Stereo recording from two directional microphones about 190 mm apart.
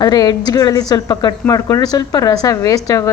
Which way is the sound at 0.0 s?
20° left (ahead or behind).